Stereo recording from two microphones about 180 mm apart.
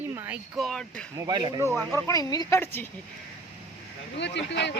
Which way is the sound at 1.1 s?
25° right (ahead or behind).